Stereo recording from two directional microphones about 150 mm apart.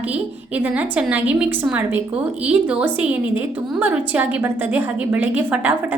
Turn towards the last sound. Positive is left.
turn(degrees=-10)  # may be behind; listen again after turning